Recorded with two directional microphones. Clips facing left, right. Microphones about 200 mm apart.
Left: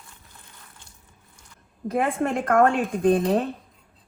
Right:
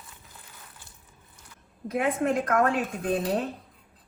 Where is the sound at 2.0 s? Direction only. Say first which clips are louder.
Even; 55° left (ahead or behind).